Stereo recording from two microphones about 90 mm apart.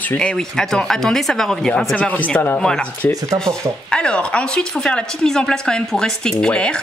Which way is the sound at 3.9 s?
10° left (ahead or behind).